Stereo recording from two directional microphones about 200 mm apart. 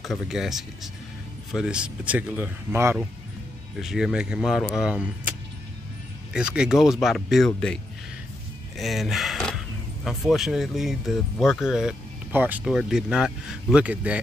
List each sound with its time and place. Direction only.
0.0 s speech: centre (ahead or behind)
6.3 s speech: 5° right (ahead or behind)
8.7 s a sound: centre (ahead or behind)
10.0 s speech: centre (ahead or behind)